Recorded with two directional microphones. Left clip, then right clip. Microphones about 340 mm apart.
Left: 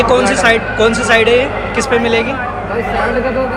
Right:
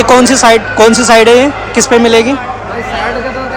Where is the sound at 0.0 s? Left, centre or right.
Centre.